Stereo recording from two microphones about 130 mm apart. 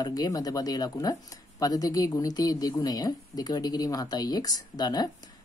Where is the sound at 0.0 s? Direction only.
30° left (ahead or behind).